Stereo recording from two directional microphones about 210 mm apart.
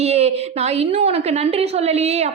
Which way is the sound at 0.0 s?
30° right (ahead or behind).